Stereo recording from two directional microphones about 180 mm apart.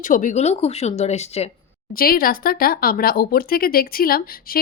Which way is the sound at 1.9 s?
55° left (ahead or behind).